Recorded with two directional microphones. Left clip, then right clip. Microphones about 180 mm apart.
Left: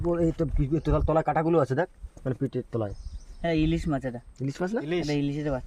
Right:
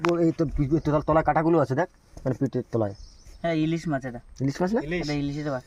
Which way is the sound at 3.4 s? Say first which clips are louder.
Even; 15° left (ahead or behind).